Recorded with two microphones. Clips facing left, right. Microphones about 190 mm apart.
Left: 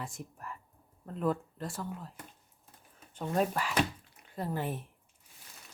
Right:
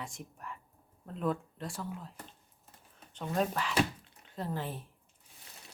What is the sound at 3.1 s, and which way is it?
Speech, 10° left (ahead or behind).